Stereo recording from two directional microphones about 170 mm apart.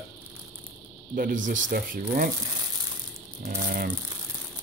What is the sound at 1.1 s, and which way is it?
Speech, 55° right (ahead or behind).